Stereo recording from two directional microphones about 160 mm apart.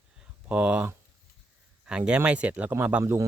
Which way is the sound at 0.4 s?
10° right (ahead or behind).